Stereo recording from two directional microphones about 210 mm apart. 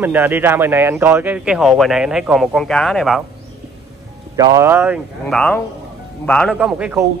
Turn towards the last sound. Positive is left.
turn(degrees=-5)  # may be behind; listen again after turning